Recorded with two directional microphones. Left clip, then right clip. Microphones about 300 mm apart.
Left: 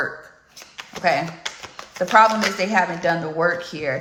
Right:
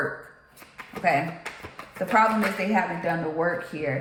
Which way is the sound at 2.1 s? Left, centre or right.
Centre.